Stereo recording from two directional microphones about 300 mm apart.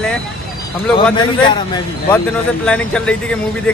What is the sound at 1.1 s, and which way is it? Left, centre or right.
Speech, centre.